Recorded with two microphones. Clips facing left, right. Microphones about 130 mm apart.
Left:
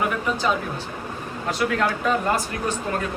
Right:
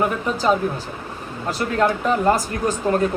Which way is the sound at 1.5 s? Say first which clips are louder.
Right 3 dB; 35° right (ahead or behind).